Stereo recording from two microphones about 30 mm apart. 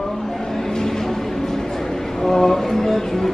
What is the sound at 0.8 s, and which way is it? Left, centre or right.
Vehicle, centre.